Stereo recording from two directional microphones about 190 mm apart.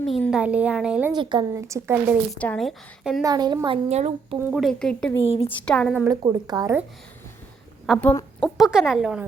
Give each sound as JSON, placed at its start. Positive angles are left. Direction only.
{"t": 0.0, "sound": "a woman's voice", "side_deg": 0}
{"t": 1.1, "sound": "a woman's voice", "side_deg": -25}
{"t": 2.3, "sound": "a woman's voice", "side_deg": 5}
{"t": 3.2, "sound": "a woman's voice", "side_deg": -20}
{"t": 3.8, "sound": "a woman's voice", "side_deg": -35}
{"t": 4.5, "sound": "a woman's voice", "side_deg": 0}
{"t": 5.2, "sound": "a woman's voice", "side_deg": 30}
{"t": 5.6, "sound": "a woman's voice", "side_deg": 5}
{"t": 6.1, "sound": "a woman's voice", "side_deg": -20}
{"t": 8.4, "sound": "a woman's voice", "side_deg": 0}